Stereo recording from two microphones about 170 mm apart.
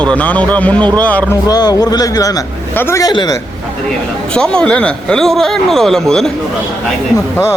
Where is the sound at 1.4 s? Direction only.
25° left (ahead or behind).